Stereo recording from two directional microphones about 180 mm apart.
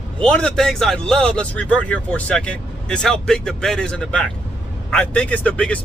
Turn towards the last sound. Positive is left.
turn(degrees=5)  # may be behind; listen again after turning